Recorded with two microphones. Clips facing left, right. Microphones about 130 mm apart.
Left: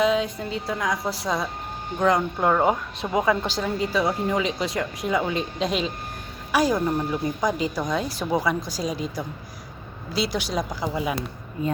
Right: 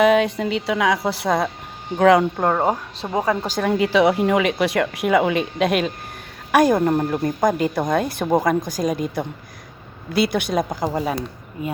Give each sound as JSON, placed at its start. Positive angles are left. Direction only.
{"t": 0.0, "sound": "speech", "side_deg": -65}
{"t": 2.0, "sound": "speech", "side_deg": -75}
{"t": 2.4, "sound": "a woman's voice", "side_deg": -40}
{"t": 3.6, "sound": "a woman's voice", "side_deg": -70}